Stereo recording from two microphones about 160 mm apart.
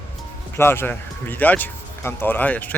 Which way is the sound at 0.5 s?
15° left (ahead or behind).